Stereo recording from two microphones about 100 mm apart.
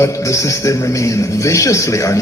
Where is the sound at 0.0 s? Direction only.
30° left (ahead or behind).